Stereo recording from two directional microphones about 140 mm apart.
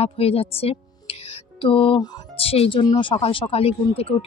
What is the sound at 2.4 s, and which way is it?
Speech, 45° left (ahead or behind).